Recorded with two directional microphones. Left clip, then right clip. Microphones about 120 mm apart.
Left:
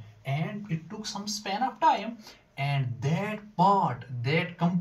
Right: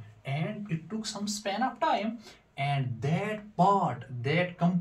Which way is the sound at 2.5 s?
25° right (ahead or behind).